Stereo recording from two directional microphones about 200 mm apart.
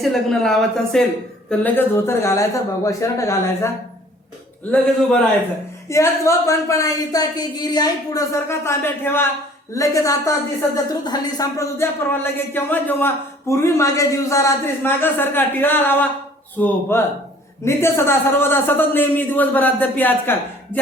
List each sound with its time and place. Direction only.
0.0 s speech: centre (ahead or behind)
5.9 s speech: 15° left (ahead or behind)